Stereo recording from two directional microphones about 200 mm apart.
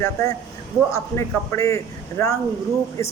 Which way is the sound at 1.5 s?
15° left (ahead or behind).